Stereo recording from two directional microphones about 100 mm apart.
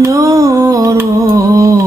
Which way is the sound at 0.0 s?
35° right (ahead or behind).